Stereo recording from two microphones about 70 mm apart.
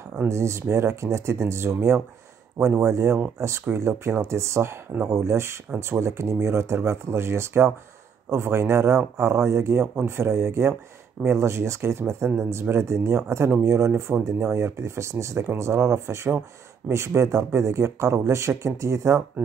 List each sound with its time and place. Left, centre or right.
0.3 s speech: right
16.3 s speech: right
16.9 s speech: right